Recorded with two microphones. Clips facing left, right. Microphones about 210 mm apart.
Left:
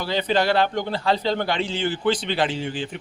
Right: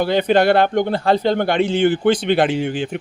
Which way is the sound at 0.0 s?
55° right (ahead or behind).